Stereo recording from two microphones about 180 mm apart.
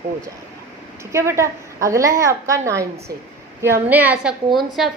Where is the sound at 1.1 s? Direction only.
15° right (ahead or behind).